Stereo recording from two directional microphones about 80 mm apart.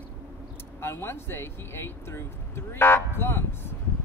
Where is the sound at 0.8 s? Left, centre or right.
Left.